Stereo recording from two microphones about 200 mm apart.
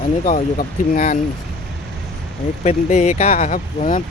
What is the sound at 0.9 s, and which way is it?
Speech, 40° left (ahead or behind).